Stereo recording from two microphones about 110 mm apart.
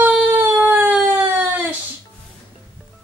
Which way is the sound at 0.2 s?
20° right (ahead or behind).